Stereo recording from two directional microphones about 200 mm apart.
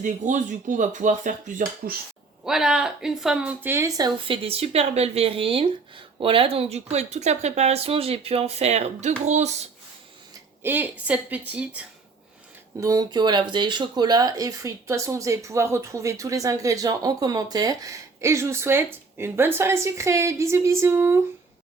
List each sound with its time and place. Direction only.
0.0 s speech: 40° right (ahead or behind)
2.4 s speech: 5° right (ahead or behind); by 9.6 s 35° right (ahead or behind)
10.6 s speech: 10° right (ahead or behind)
12.8 s speech: 20° right (ahead or behind)